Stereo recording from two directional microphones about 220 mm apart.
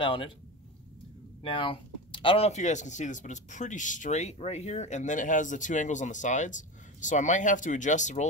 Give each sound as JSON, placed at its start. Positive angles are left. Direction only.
{"t": 0.0, "sound": "speech", "side_deg": 25}
{"t": 1.4, "sound": "speech", "side_deg": 25}